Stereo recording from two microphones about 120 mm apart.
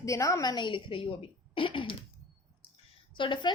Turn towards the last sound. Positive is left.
turn(degrees=40)  # may be behind; listen again after turning